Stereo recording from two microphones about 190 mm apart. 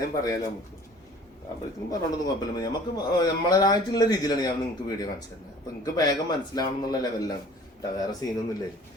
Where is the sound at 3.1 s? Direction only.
20° left (ahead or behind).